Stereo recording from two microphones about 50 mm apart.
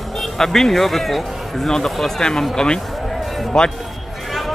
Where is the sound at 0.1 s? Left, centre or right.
Centre.